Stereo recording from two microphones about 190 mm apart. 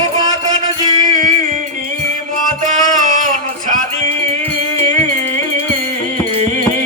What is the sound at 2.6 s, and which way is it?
Music, 40° right (ahead or behind).